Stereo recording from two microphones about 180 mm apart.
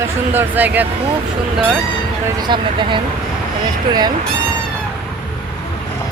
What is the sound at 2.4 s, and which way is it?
Speech, 25° right (ahead or behind).